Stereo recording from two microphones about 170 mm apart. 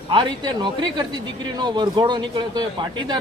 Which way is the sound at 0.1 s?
30° right (ahead or behind).